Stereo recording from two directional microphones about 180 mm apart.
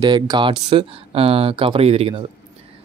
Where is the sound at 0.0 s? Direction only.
25° right (ahead or behind).